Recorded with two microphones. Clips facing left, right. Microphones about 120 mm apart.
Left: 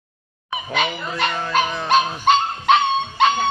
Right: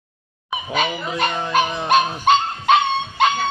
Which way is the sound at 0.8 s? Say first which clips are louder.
Right 1 dB; 15° right (ahead or behind).